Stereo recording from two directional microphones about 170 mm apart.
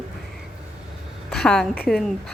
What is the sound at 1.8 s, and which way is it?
Speech, centre (ahead or behind).